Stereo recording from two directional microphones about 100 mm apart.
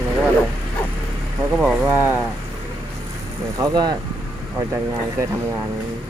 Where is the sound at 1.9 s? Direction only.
20° right (ahead or behind).